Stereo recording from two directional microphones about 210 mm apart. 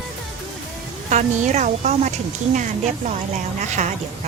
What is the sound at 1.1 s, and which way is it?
A woman's voice, 35° right (ahead or behind).